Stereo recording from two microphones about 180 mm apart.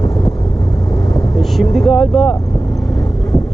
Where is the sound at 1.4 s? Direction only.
Centre (ahead or behind).